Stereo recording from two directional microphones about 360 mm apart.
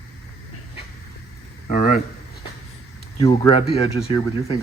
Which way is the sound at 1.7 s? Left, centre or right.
Left.